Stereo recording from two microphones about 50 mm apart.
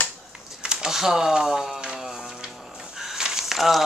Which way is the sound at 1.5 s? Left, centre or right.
Centre.